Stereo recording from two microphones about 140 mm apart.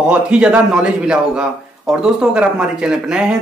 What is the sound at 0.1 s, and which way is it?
A man's voice, 10° right (ahead or behind).